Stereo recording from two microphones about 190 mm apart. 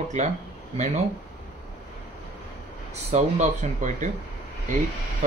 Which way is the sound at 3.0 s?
35° right (ahead or behind).